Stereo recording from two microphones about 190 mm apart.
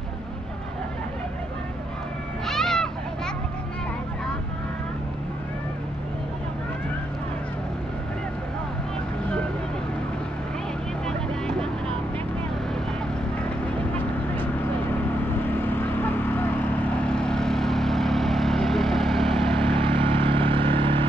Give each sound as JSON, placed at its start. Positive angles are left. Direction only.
{"t": 2.4, "sound": "music", "side_deg": 0}
{"t": 15.6, "sound": "vehicle", "side_deg": 10}
{"t": 19.6, "sound": "vehicle", "side_deg": -25}